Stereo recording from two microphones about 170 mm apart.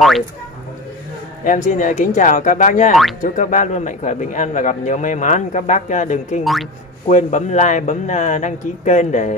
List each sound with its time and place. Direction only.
1.4 s a man's voice: 50° left (ahead or behind)
6.4 s speech: centre (ahead or behind)
7.1 s a man's voice: 45° left (ahead or behind)